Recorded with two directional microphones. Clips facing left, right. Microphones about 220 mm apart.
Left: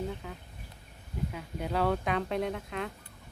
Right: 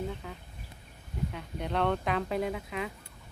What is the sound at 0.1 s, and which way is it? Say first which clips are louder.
Speech: even; centre (ahead or behind).